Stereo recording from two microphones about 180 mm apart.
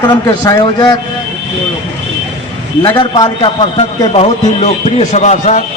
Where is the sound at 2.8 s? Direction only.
25° left (ahead or behind).